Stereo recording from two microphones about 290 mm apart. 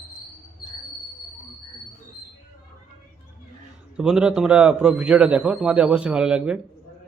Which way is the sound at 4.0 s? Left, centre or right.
Centre.